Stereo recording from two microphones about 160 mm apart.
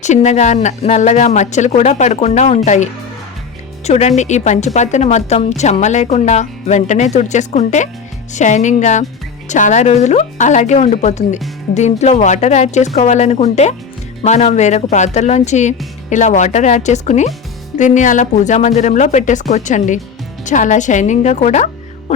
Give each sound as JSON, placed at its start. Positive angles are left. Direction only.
{"t": 0.0, "sound": "speech", "side_deg": 45}